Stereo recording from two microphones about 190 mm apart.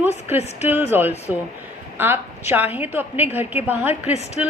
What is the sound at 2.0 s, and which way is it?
A woman's voice, 10° right (ahead or behind).